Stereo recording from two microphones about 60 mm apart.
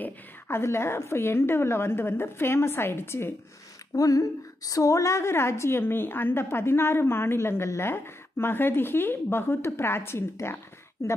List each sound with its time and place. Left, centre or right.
0.5 s a woman's voice: left
3.9 s a woman's voice: left
10.4 s a sound: left